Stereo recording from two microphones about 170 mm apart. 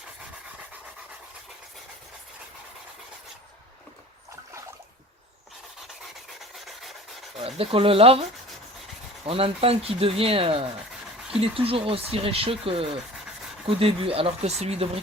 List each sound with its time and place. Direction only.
6.7 s rub: centre (ahead or behind)
7.3 s speech: 35° right (ahead or behind)
9.2 s speech: 35° right (ahead or behind)